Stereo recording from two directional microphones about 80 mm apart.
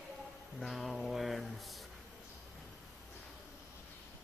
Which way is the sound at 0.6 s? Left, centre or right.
Centre.